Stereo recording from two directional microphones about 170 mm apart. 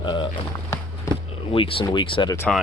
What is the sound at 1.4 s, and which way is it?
Speech, 30° left (ahead or behind).